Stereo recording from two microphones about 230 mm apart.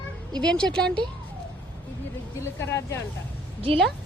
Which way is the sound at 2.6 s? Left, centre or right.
Centre.